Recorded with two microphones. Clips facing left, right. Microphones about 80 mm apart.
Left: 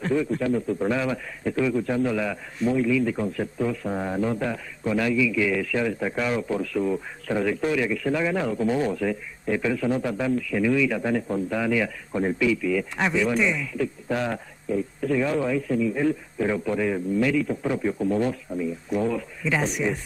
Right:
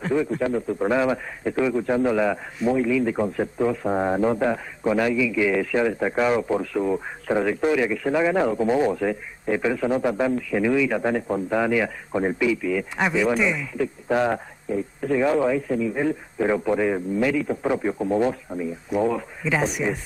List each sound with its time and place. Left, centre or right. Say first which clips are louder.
0.0 s speech: right 1 dB; centre
12.9 s speech: right 2 dB; centre
13.6 s speech: right 1 dB; centre
19.4 s speech: right 1 dB; centre